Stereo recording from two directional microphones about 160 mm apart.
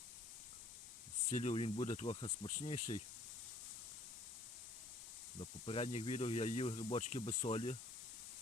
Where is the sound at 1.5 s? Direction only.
35° left (ahead or behind).